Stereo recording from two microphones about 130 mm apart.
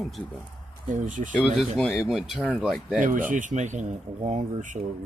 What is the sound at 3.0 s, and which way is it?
Speech, 90° right.